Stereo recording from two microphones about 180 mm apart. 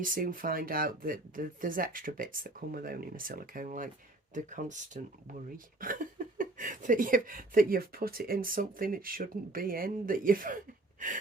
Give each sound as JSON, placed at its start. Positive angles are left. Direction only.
{"t": 0.0, "sound": "speech", "side_deg": -50}
{"t": 5.8, "sound": "speech", "side_deg": -50}